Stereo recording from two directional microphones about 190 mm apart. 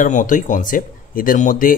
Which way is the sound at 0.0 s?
45° left (ahead or behind).